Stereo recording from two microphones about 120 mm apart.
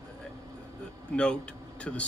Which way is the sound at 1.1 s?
10° left (ahead or behind).